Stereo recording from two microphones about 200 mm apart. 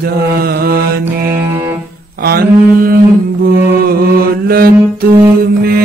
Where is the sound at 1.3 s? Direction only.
10° right (ahead or behind).